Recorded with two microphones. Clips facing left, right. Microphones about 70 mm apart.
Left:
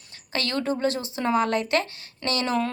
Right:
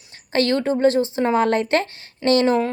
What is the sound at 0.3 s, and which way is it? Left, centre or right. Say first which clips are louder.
Speech: right 7 dB; right.